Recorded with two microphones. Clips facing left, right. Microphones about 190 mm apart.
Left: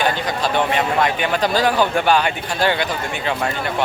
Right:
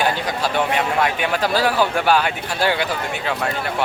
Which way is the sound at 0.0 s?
10° right (ahead or behind).